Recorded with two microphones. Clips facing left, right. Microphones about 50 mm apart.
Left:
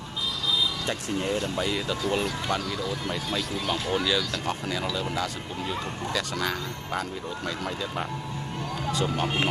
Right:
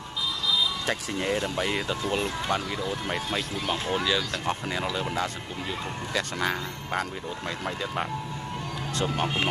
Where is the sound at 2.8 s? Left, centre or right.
Right.